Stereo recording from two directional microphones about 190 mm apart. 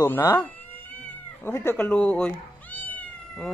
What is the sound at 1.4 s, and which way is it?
Speech, 15° left (ahead or behind).